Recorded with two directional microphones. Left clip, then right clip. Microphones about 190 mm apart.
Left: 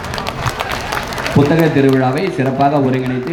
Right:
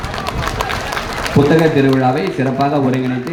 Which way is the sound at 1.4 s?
30° left (ahead or behind).